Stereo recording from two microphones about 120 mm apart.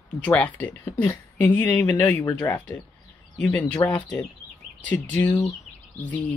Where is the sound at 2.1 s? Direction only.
30° left (ahead or behind).